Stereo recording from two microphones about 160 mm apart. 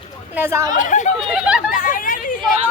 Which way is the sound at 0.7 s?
50° left (ahead or behind).